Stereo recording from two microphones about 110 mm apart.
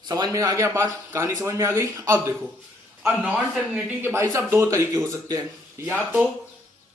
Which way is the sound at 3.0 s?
15° right (ahead or behind).